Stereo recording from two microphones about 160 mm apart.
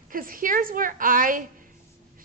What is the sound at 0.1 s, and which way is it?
A woman's voice, 60° right (ahead or behind).